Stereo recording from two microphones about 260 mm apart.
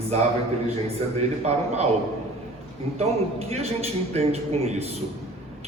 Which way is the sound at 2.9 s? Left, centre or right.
Right.